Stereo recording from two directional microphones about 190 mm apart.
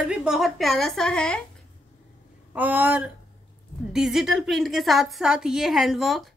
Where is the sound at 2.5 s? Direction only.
10° right (ahead or behind).